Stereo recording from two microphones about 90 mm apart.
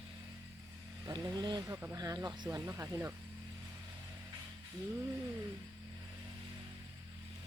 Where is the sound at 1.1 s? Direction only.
50° right (ahead or behind).